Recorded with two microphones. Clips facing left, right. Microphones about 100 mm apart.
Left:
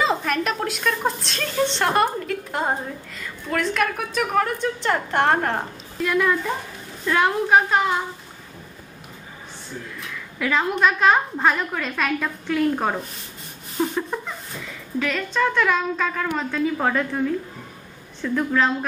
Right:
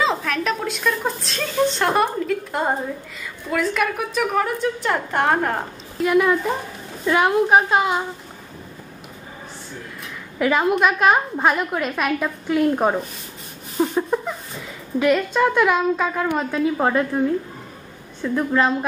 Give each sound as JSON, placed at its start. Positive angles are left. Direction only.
{"t": 0.0, "sound": "a woman's voice", "side_deg": 5}
{"t": 10.4, "sound": "a woman's voice", "side_deg": -15}
{"t": 13.7, "sound": "a sound", "side_deg": -5}
{"t": 15.0, "sound": "a woman's voice", "side_deg": -15}